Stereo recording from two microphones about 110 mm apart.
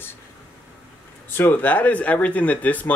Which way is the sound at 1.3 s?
15° left (ahead or behind).